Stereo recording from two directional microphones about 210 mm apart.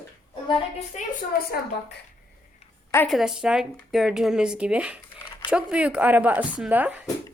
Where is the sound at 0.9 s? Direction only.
45° left (ahead or behind).